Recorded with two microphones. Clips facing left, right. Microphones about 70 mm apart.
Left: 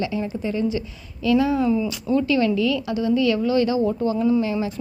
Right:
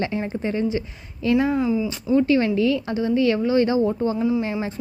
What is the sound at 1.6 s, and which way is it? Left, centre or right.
Speech, centre.